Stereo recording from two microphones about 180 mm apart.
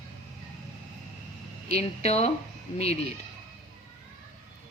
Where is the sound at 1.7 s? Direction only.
35° left (ahead or behind).